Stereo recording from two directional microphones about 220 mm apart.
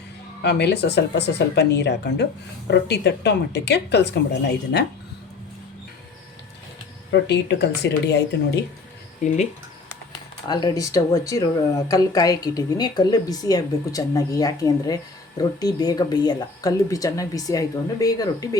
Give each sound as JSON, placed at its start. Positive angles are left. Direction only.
{"t": 0.4, "sound": "a woman's voice", "side_deg": 50}
{"t": 7.1, "sound": "a woman's voice", "side_deg": 50}
{"t": 9.2, "sound": "speech", "side_deg": 35}
{"t": 10.5, "sound": "a woman's voice", "side_deg": 15}